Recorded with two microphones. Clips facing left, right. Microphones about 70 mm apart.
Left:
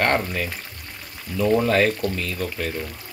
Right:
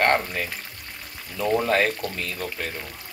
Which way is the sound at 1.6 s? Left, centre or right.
Right.